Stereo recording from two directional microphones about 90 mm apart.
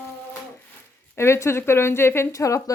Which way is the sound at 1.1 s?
30° left (ahead or behind).